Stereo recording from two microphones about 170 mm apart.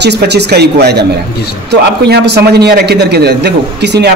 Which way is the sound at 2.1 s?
75° right (ahead or behind).